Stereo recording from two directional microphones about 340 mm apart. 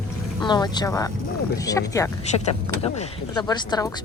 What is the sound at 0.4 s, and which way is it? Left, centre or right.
Speech, centre.